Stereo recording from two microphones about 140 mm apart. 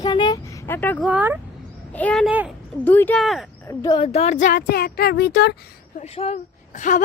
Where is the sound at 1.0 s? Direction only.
10° right (ahead or behind).